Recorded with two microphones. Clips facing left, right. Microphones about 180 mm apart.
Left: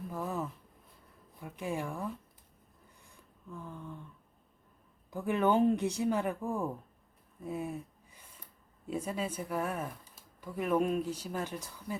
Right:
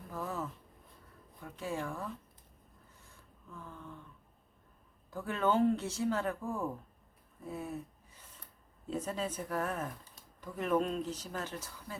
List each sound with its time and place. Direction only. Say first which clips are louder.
0.1 s a sound: left 2 dB; 15° left (ahead or behind)
1.4 s speech: left 2 dB; 15° left (ahead or behind)
3.5 s speech: left 4 dB; 15° left (ahead or behind)
5.1 s speech: left 3 dB; 15° left (ahead or behind)
7.4 s a sound: left 3 dB; 15° left (ahead or behind)
8.9 s speech: left 1 dB; 10° left (ahead or behind)